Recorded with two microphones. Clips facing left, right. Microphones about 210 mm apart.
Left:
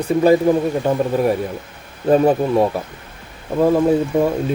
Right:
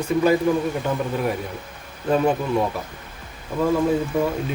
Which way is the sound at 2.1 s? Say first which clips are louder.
Left 6 dB; 35° left (ahead or behind).